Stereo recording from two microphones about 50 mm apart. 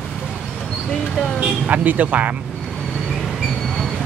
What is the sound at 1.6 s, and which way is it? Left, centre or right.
Speech, right.